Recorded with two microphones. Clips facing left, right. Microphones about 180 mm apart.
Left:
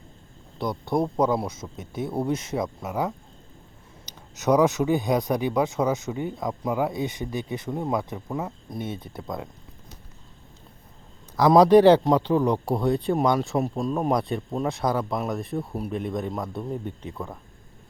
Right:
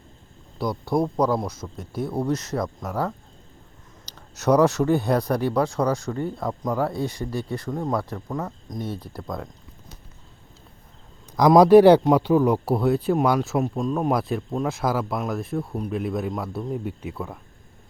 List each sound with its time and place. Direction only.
0.6 s a man's voice: centre (ahead or behind)
4.4 s a man's voice: centre (ahead or behind)
4.9 s speech: 15° left (ahead or behind)
6.5 s a man's voice: 5° left (ahead or behind)
6.9 s speech: 20° left (ahead or behind)
7.7 s a man's voice: 5° left (ahead or behind)
11.3 s a man's voice: 15° right (ahead or behind)